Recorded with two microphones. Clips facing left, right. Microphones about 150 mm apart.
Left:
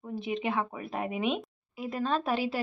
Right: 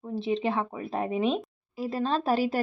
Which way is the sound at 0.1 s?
30° right (ahead or behind).